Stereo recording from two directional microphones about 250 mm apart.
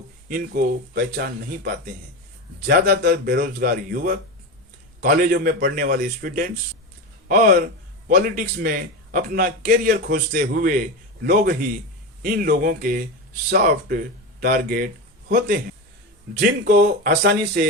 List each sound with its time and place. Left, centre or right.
0.3 s a man's voice: right